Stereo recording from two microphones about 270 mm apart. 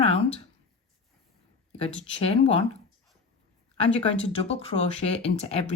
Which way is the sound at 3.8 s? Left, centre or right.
Left.